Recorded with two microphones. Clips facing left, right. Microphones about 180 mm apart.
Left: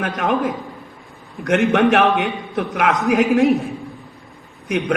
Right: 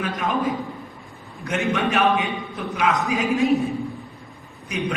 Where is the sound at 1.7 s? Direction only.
75° left (ahead or behind).